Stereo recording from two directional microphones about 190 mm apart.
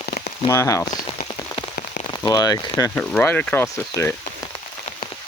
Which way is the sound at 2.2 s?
20° left (ahead or behind).